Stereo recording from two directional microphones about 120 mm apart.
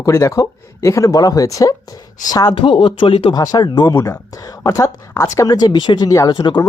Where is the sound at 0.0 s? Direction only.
25° left (ahead or behind).